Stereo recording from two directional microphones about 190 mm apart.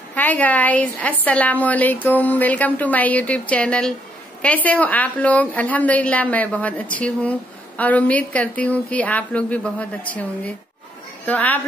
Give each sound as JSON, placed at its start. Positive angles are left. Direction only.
{"t": 0.1, "sound": "a woman's voice", "side_deg": 10}